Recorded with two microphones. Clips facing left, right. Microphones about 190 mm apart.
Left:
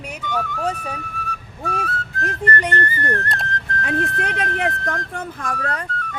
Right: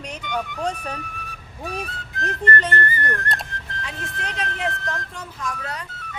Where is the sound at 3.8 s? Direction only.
60° left (ahead or behind).